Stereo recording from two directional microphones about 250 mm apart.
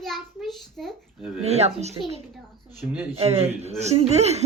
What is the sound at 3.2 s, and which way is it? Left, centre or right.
Speech, right.